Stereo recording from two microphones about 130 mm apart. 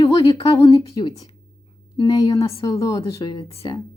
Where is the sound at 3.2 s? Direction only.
45° left (ahead or behind).